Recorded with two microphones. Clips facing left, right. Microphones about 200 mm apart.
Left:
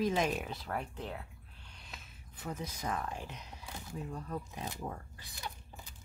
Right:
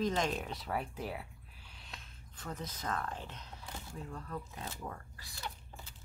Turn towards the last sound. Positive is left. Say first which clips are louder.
# even
turn(degrees=15)  # may be behind; listen again after turning